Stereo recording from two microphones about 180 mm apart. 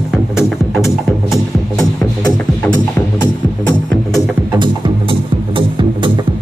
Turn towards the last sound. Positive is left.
turn(degrees=-30)  # may be behind; listen again after turning